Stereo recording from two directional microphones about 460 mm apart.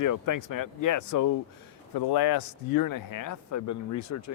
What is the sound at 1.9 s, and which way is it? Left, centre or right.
Speech, left.